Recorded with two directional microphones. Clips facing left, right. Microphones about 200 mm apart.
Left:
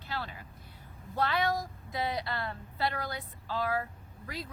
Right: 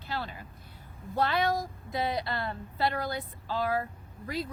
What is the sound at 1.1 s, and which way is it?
A woman's voice, 30° right (ahead or behind).